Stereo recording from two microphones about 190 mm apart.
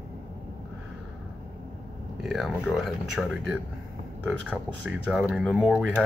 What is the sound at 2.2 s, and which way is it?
Speech, centre (ahead or behind).